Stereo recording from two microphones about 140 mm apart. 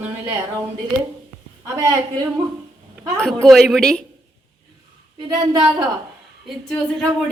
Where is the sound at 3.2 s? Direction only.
Centre (ahead or behind).